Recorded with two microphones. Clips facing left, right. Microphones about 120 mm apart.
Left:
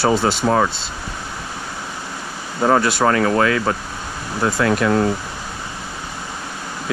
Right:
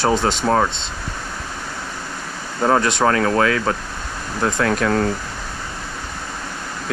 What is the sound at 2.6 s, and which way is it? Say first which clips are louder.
Speech: left 1 dB; 10° left (ahead or behind).